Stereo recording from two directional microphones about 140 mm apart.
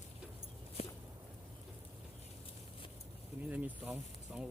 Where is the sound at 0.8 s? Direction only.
45° left (ahead or behind).